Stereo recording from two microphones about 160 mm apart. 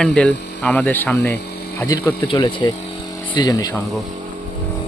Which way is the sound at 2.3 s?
30° left (ahead or behind).